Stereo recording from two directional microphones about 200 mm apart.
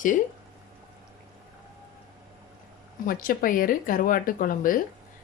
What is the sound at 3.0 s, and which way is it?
A woman's voice, 45° left (ahead or behind).